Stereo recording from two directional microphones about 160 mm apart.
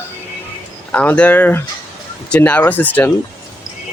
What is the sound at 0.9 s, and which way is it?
Speech, 10° left (ahead or behind).